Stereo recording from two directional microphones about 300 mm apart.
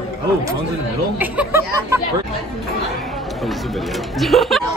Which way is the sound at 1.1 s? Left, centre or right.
Centre.